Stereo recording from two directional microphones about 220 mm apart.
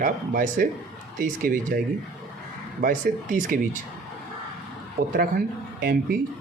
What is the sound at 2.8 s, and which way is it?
Speech, 35° right (ahead or behind).